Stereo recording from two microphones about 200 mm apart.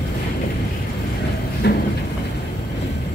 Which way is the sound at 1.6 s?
55° left (ahead or behind).